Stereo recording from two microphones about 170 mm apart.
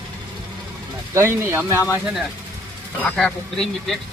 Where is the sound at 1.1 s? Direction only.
15° right (ahead or behind).